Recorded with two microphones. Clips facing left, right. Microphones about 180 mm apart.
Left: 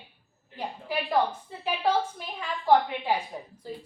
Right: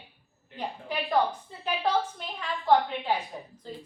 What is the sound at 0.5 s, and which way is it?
A woman's voice, 5° left (ahead or behind).